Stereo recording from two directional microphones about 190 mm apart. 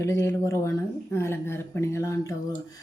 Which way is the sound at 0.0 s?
15° left (ahead or behind).